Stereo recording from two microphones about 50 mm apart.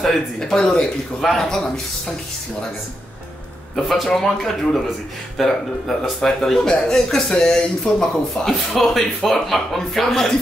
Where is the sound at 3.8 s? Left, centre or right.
Centre.